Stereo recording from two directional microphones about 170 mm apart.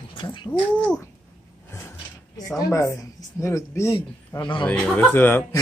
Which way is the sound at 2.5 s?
20° left (ahead or behind).